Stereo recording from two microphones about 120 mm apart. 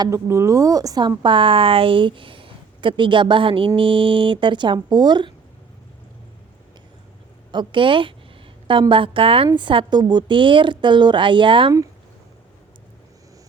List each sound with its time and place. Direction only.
0.0 s speech: 25° right (ahead or behind)
7.5 s speech: 40° right (ahead or behind)